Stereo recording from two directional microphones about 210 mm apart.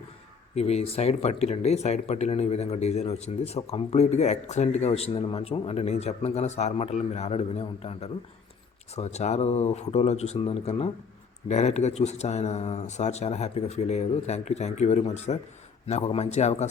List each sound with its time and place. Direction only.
0.5 s speech: 30° left (ahead or behind)